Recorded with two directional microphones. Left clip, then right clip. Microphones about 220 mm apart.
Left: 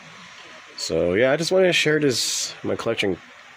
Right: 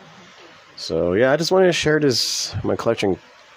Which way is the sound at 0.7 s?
5° right (ahead or behind).